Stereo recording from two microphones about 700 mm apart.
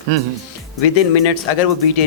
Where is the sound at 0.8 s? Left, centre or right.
Left.